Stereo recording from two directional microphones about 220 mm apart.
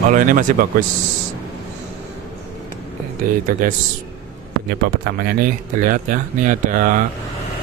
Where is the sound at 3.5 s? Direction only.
40° right (ahead or behind).